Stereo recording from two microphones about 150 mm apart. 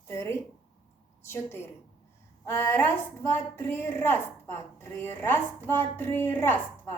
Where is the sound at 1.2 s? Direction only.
15° left (ahead or behind).